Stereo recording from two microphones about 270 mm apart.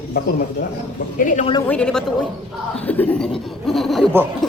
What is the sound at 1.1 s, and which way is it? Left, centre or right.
Speech, left.